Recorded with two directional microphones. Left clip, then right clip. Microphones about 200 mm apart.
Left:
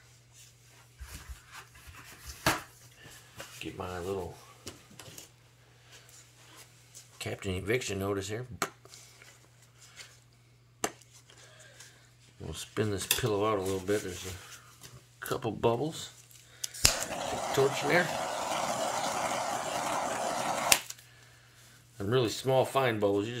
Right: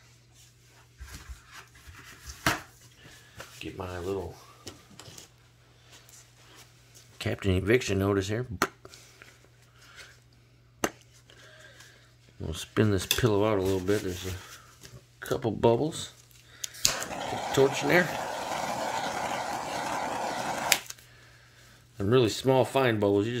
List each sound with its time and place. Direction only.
3.7 s speech: 25° right (ahead or behind)
7.2 s speech: 55° right (ahead or behind)
10.8 s chopping: 55° right (ahead or behind)
12.4 s cutlery: 50° right (ahead or behind)
15.1 s speech: 30° right (ahead or behind)
16.5 s scissors: 50° right (ahead or behind)
16.9 s a sound: 15° right (ahead or behind)
18.1 s vehicle: 15° right (ahead or behind)
21.9 s cutlery: 45° right (ahead or behind)